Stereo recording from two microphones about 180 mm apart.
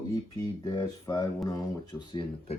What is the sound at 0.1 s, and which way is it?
Speech, 20° left (ahead or behind).